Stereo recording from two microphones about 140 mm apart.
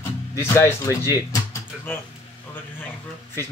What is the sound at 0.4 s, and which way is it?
Speech, 20° left (ahead or behind).